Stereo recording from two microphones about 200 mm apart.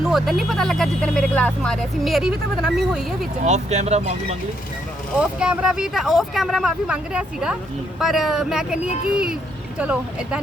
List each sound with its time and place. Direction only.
0.0 s speech: centre (ahead or behind)
3.4 s speech: 35° right (ahead or behind)
5.4 s speech: 5° right (ahead or behind)